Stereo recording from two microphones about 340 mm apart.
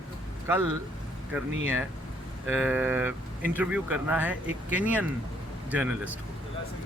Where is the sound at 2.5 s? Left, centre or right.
Centre.